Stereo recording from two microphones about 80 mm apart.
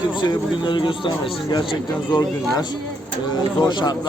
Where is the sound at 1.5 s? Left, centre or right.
Left.